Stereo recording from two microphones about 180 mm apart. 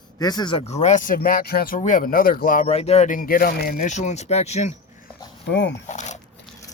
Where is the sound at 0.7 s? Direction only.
40° left (ahead or behind).